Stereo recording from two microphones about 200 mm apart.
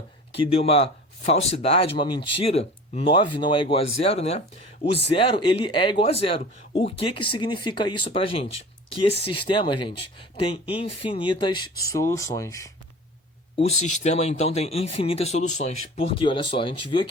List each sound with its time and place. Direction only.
0.3 s speech: 30° left (ahead or behind)
13.6 s speech: 35° left (ahead or behind)